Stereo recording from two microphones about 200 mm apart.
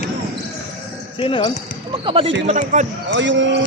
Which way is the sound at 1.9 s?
25° right (ahead or behind).